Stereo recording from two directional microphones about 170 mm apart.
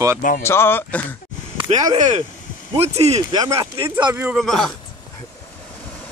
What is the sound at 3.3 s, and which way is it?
Speech, 25° right (ahead or behind).